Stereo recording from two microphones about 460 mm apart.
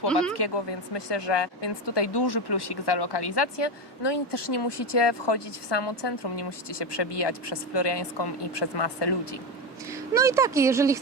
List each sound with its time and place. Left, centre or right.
0.1 s speech: centre
0.3 s speech: left
9.9 s speech: centre